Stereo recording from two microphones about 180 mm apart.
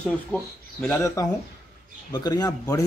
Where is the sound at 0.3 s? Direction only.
10° left (ahead or behind).